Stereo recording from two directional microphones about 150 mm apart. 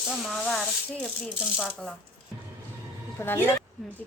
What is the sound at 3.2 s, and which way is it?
Speech, 15° left (ahead or behind).